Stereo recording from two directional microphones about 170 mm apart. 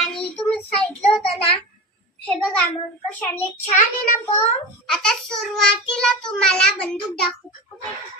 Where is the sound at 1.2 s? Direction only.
35° left (ahead or behind).